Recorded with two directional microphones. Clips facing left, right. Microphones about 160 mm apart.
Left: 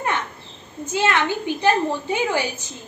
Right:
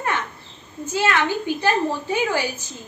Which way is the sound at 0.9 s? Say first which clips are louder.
Even; 20° left (ahead or behind).